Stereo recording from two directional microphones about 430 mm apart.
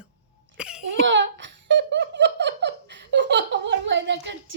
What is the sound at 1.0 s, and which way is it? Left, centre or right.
Giggle, right.